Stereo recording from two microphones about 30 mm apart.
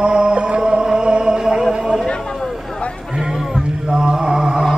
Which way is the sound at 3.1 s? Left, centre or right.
Centre.